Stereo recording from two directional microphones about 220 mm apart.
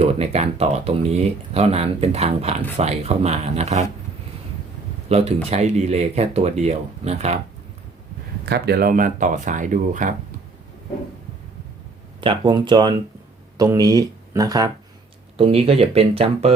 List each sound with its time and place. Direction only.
0.0 s speech: 30° right (ahead or behind)
5.0 s speech: 30° right (ahead or behind)
8.4 s speech: 45° right (ahead or behind)
12.2 s speech: 20° right (ahead or behind)